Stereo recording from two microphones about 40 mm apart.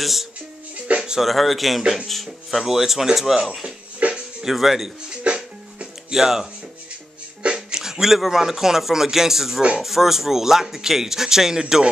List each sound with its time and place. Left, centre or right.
0.0 s speech: centre
0.9 s music: right
1.2 s speech: centre
4.0 s music: right
4.5 s speech: centre
5.2 s music: right
6.1 s speech: centre